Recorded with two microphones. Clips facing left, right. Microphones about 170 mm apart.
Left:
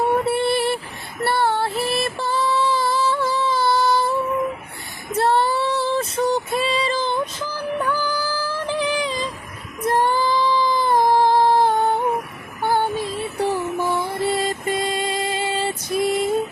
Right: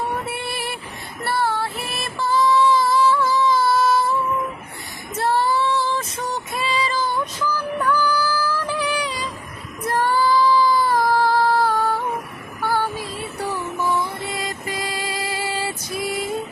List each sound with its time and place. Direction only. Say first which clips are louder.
0.2 s a sound: left 9 dB; 30° left (ahead or behind)
1.2 s female singing: left 3 dB; 25° left (ahead or behind)
2.2 s music: right 6 dB; 30° left (ahead or behind)
5.1 s female singing: left 2 dB; 30° left (ahead or behind)
9.8 s child singing: left 1 dB; 20° left (ahead or behind)
13.0 s music: left 5 dB; centre (ahead or behind)
14.3 s music: left 6 dB; 30° left (ahead or behind)